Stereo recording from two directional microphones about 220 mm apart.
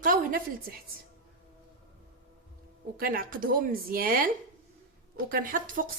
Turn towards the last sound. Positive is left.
turn(degrees=-40)  # may be behind; listen again after turning